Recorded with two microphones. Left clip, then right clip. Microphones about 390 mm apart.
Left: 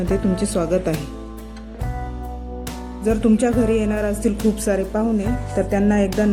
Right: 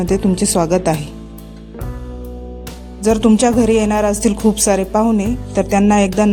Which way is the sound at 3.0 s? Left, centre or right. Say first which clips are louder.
Right 6 dB; centre.